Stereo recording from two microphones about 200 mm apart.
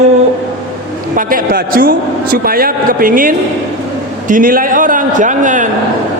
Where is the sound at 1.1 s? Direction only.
45° right (ahead or behind).